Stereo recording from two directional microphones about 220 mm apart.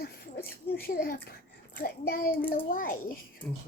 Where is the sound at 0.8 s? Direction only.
40° left (ahead or behind).